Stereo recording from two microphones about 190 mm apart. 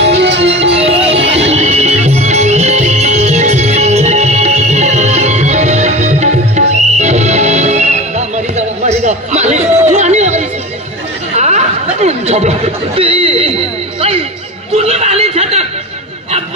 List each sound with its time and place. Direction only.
0.0 s music: 65° right (ahead or behind)
0.7 s music: 30° right (ahead or behind)
8.5 s chatter: 35° right (ahead or behind)
14.8 s a sound: 35° right (ahead or behind)